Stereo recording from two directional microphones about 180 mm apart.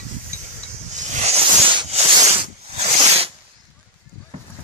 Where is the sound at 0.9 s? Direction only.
35° right (ahead or behind).